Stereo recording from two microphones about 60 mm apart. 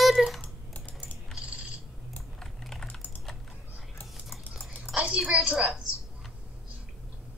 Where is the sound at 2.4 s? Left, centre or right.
Centre.